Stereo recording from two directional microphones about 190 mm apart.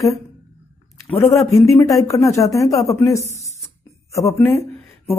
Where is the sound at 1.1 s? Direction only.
15° left (ahead or behind).